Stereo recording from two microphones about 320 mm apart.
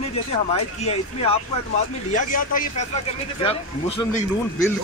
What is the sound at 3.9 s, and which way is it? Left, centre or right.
Speech, centre.